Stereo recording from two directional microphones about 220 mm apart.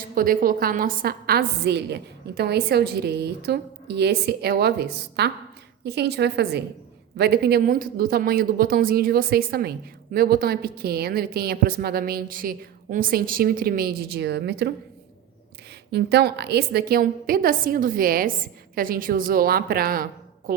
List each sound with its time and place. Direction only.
0.1 s a man's voice: 40° right (ahead or behind)
15.9 s a man's voice: 50° right (ahead or behind)